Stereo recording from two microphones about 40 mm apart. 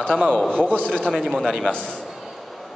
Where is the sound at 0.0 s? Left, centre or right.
Left.